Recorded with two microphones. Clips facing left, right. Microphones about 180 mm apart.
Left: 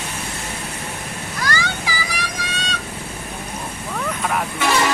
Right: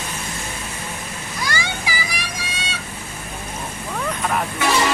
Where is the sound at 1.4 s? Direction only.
15° right (ahead or behind).